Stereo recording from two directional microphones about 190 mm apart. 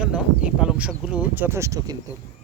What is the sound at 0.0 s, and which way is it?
Speech, 5° right (ahead or behind).